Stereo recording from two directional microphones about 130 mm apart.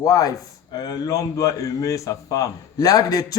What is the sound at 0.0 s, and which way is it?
A man's voice, 25° left (ahead or behind).